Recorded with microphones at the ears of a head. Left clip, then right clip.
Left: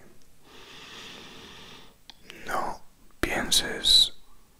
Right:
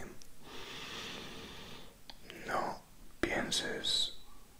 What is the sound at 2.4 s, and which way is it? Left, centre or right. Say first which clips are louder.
Whispering: left 6 dB; left.